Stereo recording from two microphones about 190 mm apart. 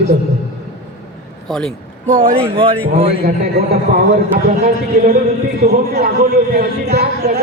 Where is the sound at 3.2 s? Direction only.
50° right (ahead or behind).